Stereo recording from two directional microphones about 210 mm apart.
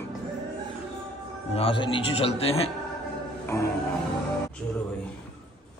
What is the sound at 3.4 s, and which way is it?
Music, 15° left (ahead or behind).